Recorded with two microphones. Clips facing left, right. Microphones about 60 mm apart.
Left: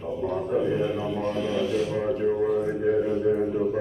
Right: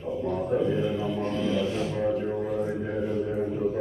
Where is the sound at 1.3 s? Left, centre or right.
Centre.